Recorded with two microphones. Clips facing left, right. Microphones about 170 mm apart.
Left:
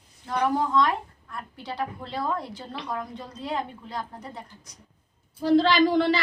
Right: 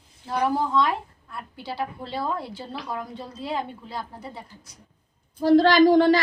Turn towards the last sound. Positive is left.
turn(degrees=-45)  # may be behind; listen again after turning